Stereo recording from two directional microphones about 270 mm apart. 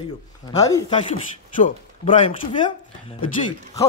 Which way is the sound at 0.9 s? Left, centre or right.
Left.